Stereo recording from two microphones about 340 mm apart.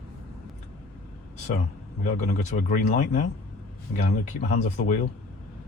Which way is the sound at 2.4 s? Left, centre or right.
Left.